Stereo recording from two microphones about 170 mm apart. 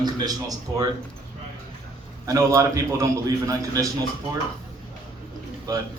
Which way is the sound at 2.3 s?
15° right (ahead or behind).